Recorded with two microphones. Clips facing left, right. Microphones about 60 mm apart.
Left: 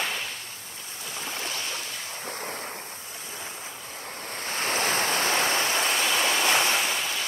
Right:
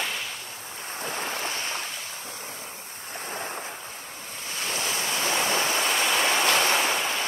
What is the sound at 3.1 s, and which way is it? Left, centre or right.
Waves, right.